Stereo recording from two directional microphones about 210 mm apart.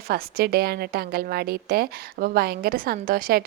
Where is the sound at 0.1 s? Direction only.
50° right (ahead or behind).